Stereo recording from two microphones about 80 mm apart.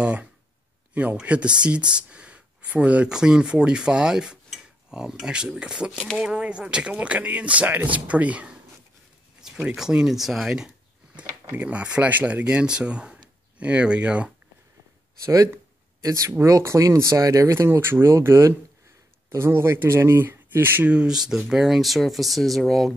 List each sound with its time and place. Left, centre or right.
0.0 s speech: centre
9.4 s a sound: centre
9.8 s speech: centre
11.5 s speech: centre
15.2 s speech: right
20.9 s speech: centre